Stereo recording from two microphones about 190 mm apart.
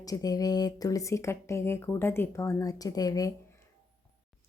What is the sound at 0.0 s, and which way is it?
Speech, 20° left (ahead or behind).